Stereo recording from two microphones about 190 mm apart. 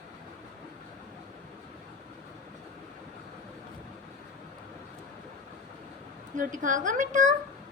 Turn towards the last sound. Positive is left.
turn(degrees=-40)  # may be behind; listen again after turning